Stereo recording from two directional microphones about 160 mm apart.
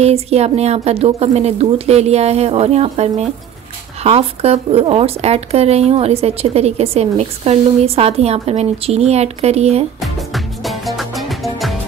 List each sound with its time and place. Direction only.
0.0 s speech: 40° right (ahead or behind)
9.9 s music: centre (ahead or behind)